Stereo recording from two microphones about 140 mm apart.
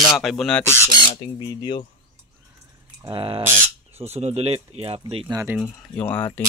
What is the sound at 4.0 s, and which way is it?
Speech, 50° right (ahead or behind).